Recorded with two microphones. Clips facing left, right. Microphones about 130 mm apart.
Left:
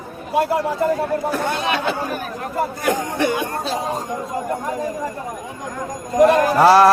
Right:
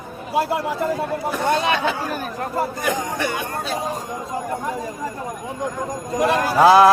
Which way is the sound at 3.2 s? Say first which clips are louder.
Left 4 dB; 20° left (ahead or behind).